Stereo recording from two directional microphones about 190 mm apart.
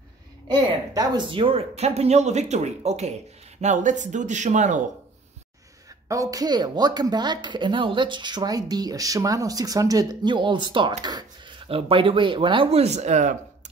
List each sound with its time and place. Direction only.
0.5 s speech: 25° right (ahead or behind); by 4.8 s 40° right (ahead or behind)
6.0 s speech: 15° right (ahead or behind); by 13.4 s 40° right (ahead or behind)